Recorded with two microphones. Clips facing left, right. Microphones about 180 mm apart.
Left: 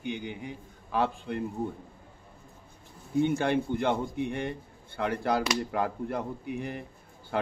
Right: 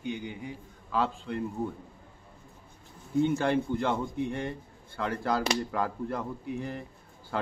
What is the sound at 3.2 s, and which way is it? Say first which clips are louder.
A man's voice: even; 20° left (ahead or behind).